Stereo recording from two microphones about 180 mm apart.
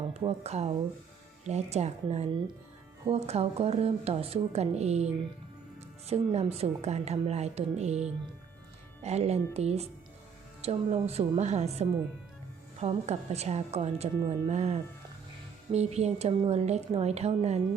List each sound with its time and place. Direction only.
0.1 s a woman's voice: 35° right (ahead or behind)